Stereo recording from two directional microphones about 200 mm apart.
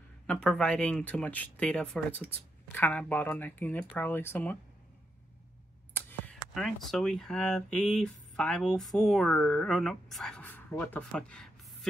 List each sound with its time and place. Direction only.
0.3 s speech: 5° left (ahead or behind)
5.9 s speech: 10° left (ahead or behind)